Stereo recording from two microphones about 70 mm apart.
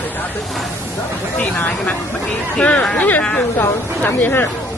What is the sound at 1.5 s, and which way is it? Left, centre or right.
Speech, left.